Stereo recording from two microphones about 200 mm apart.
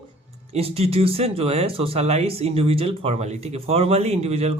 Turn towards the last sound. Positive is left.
turn(degrees=-30)  # may be behind; listen again after turning